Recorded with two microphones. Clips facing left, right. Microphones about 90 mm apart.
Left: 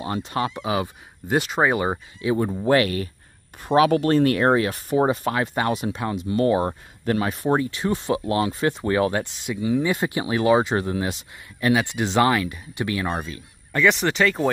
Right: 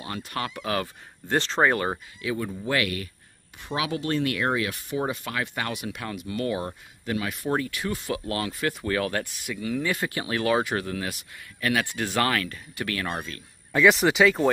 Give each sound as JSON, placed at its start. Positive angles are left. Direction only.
{"t": 0.0, "sound": "speech", "side_deg": 25}
{"t": 2.2, "sound": "speech", "side_deg": 35}
{"t": 3.6, "sound": "speech", "side_deg": 45}
{"t": 13.7, "sound": "speech", "side_deg": -5}